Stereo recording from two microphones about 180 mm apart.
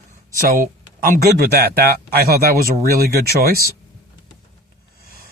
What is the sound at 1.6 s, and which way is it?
Speech, 60° right (ahead or behind).